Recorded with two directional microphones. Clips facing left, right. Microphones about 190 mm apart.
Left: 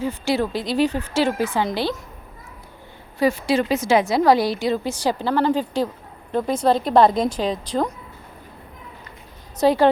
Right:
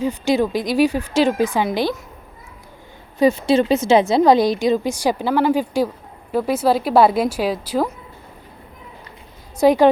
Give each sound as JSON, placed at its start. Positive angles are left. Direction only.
{"t": 0.0, "sound": "speech", "side_deg": -15}
{"t": 3.2, "sound": "a woman's voice", "side_deg": -25}
{"t": 9.6, "sound": "speech", "side_deg": -15}